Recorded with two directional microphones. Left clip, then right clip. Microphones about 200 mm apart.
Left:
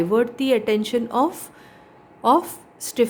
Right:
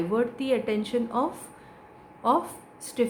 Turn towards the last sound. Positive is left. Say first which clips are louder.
# left 6 dB
turn(degrees=55)  # may be behind; listen again after turning